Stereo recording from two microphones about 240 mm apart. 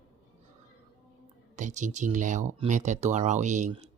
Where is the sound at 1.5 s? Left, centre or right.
Right.